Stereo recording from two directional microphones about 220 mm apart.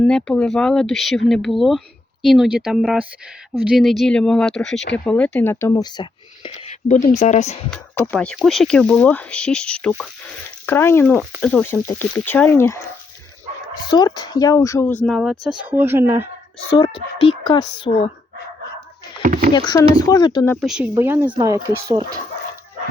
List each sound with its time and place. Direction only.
0.0 s speech: 5° left (ahead or behind); by 6.7 s 20° left (ahead or behind)
6.8 s speech: 35° left (ahead or behind)
7.7 s speech: 5° left (ahead or behind)
13.9 s speech: 20° left (ahead or behind); by 16.3 s 10° right (ahead or behind)
16.6 s speech: 20° left (ahead or behind)
19.2 s a sound: 35° right (ahead or behind)
19.5 s speech: 20° left (ahead or behind)
20.6 s speech: 5° right (ahead or behind)